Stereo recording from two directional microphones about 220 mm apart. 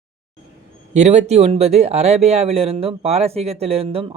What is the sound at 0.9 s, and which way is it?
Speech, 30° right (ahead or behind).